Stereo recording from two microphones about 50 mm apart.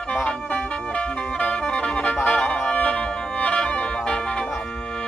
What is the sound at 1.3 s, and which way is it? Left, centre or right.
Music, left.